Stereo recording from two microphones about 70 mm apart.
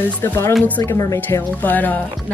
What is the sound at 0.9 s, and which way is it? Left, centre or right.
Speech, left.